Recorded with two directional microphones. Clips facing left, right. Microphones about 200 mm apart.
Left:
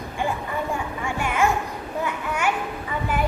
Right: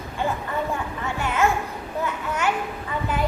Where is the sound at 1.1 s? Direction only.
10° left (ahead or behind).